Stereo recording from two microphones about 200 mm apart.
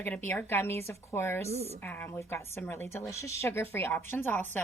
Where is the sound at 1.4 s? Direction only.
35° right (ahead or behind).